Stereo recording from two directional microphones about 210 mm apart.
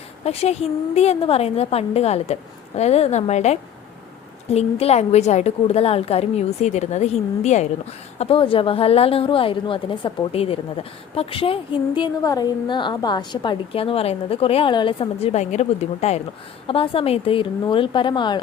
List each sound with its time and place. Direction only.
0.3 s a woman's voice: 30° left (ahead or behind)